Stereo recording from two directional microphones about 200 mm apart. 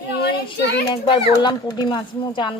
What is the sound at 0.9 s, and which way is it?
Speech, 20° left (ahead or behind).